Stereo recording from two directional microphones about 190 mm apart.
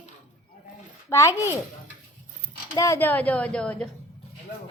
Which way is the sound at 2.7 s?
15° left (ahead or behind).